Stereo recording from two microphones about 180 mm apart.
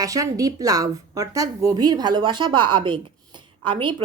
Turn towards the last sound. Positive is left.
turn(degrees=-25)  # may be behind; listen again after turning